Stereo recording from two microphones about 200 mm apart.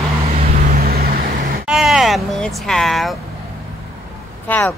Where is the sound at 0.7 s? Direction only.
45° right (ahead or behind).